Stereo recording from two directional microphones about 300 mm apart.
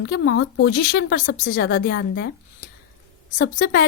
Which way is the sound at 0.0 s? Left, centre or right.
Left.